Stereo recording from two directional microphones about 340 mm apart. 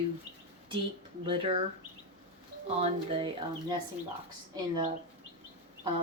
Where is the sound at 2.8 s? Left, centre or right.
Centre.